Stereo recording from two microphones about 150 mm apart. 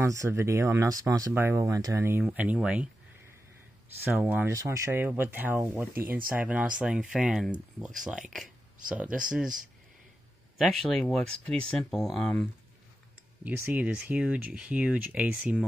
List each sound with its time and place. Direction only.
0.0 s speech: 20° right (ahead or behind)
4.0 s speech: 15° right (ahead or behind)
10.6 s speech: centre (ahead or behind)
13.4 s speech: 10° right (ahead or behind)